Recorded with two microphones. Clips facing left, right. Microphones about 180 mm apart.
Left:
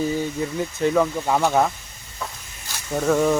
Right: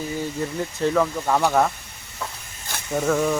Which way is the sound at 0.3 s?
5° left (ahead or behind).